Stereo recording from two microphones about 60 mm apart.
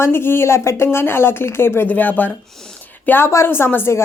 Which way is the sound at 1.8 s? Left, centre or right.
Left.